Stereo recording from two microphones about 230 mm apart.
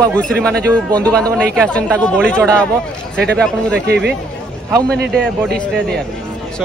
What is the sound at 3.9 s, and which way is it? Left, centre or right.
Speech, right.